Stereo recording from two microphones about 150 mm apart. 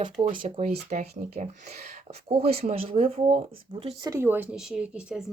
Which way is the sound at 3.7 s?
35° right (ahead or behind).